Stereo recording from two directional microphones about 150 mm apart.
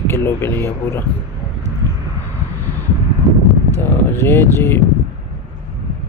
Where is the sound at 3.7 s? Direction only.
15° left (ahead or behind).